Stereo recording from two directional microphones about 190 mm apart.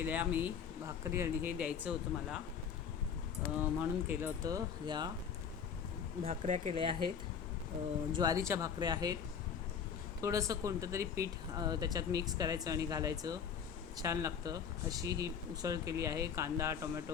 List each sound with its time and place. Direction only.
0.0 s speech: 10° right (ahead or behind)
3.6 s speech: 10° right (ahead or behind)
6.2 s speech: 35° right (ahead or behind)
8.1 s speech: 20° right (ahead or behind)
10.2 s speech: 15° right (ahead or behind)